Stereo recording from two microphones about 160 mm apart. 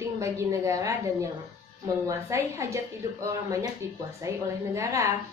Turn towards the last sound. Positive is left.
turn(degrees=-20)  # may be behind; listen again after turning